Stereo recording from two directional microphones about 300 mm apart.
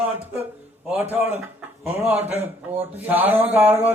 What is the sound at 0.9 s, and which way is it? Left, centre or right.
A man's voice, centre.